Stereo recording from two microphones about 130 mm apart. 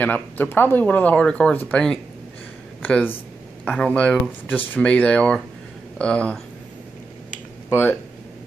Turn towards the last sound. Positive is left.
turn(degrees=15)  # may be behind; listen again after turning